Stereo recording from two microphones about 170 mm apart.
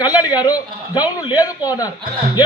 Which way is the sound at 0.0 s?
25° left (ahead or behind).